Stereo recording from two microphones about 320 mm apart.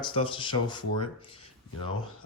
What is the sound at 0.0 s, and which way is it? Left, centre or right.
A man's voice, centre.